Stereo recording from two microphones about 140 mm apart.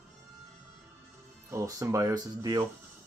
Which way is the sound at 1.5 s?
20° right (ahead or behind).